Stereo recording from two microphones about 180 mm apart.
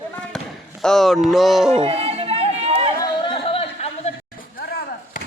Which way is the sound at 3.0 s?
30° left (ahead or behind).